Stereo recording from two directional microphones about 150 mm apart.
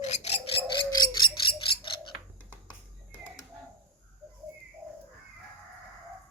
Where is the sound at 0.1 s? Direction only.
45° left (ahead or behind).